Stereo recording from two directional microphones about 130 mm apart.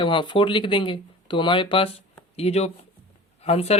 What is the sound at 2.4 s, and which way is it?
A man's voice, 55° left (ahead or behind).